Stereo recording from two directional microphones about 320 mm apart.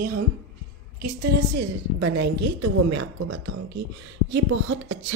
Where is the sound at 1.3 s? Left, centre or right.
Right.